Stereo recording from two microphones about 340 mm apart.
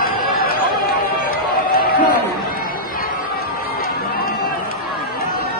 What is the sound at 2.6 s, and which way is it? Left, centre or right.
Crowd, left.